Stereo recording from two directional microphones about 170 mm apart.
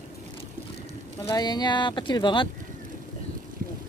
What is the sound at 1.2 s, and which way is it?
Speech, 25° left (ahead or behind).